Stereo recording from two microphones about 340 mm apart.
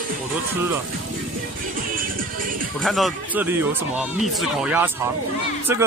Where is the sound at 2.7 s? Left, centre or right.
Centre.